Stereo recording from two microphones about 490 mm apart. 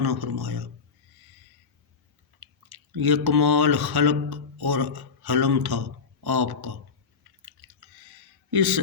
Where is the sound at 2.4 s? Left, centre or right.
Right.